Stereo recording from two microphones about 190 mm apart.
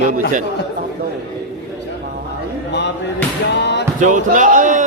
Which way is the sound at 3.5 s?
65° left (ahead or behind).